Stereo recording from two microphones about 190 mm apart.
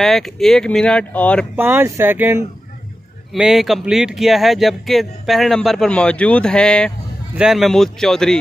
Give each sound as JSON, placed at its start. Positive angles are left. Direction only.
{"t": 0.0, "sound": "speech", "side_deg": 0}
{"t": 1.6, "sound": "speech", "side_deg": -10}